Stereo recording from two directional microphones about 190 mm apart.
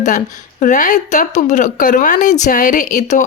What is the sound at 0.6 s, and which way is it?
Speech, 40° left (ahead or behind).